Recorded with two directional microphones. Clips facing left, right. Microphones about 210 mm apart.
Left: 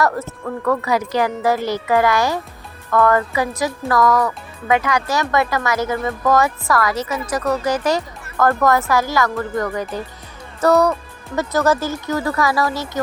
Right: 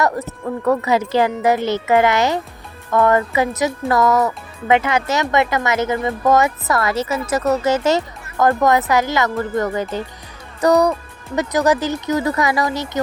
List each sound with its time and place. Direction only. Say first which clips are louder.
0.0 s speech: even; 20° right (ahead or behind)